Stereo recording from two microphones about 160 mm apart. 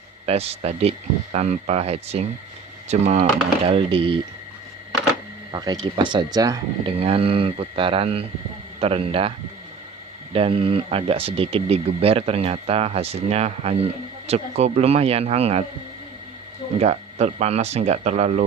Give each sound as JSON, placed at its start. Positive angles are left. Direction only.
{"t": 0.3, "sound": "speech", "side_deg": -40}
{"t": 3.6, "sound": "speech", "side_deg": -35}
{"t": 5.5, "sound": "speech", "side_deg": -25}
{"t": 7.0, "sound": "speech", "side_deg": -40}
{"t": 10.3, "sound": "speech", "side_deg": -35}
{"t": 16.8, "sound": "speech", "side_deg": -45}